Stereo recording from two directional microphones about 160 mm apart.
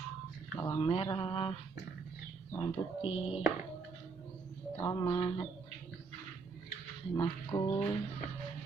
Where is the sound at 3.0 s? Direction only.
35° left (ahead or behind).